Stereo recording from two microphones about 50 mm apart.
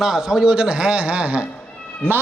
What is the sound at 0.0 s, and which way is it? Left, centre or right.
A man's voice, centre.